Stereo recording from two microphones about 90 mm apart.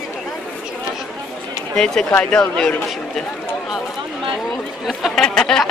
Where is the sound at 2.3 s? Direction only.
10° left (ahead or behind).